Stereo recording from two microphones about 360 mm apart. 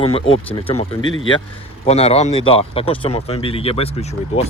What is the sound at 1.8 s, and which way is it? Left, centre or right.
Speech, centre.